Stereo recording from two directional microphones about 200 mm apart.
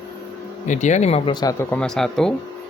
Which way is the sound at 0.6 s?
35° left (ahead or behind).